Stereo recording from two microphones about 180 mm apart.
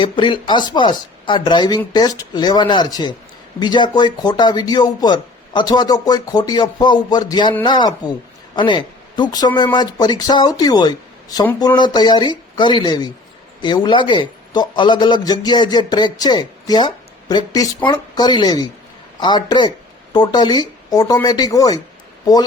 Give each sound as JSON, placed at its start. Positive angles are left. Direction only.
{"t": 0.0, "sound": "a man's voice", "side_deg": 25}